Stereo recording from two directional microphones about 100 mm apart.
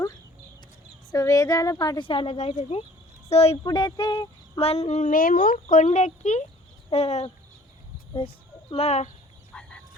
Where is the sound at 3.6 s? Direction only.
45° left (ahead or behind).